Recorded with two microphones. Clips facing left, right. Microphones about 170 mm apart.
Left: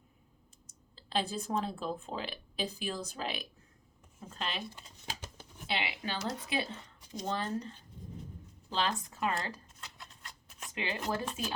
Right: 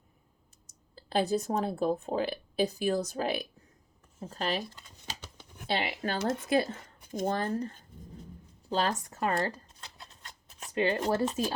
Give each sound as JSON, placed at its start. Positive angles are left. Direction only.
{"t": 0.9, "sound": "speech", "side_deg": -45}
{"t": 5.7, "sound": "speech", "side_deg": -45}
{"t": 8.7, "sound": "a sound", "side_deg": -40}
{"t": 10.8, "sound": "speech", "side_deg": -40}